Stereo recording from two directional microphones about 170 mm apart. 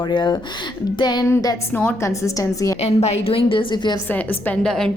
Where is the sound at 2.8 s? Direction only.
40° left (ahead or behind).